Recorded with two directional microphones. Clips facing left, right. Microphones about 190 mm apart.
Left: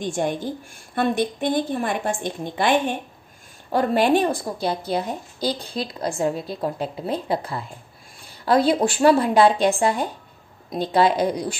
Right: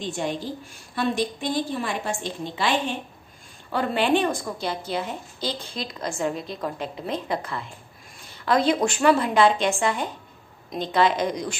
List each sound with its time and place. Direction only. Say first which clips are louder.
0.1 s a woman's voice: left 3 dB; 50° left (ahead or behind); by 11.5 s 35° left (ahead or behind)